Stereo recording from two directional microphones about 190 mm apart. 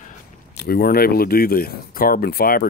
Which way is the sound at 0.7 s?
55° left (ahead or behind).